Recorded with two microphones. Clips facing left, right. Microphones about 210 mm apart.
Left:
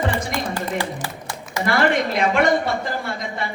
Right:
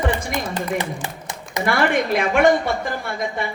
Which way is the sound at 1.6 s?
55° right (ahead or behind).